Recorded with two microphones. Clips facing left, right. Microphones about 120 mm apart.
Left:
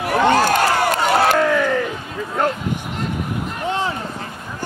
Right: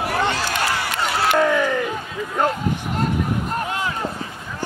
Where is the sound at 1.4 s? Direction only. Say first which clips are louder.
Left 1 dB; 5° right (ahead or behind).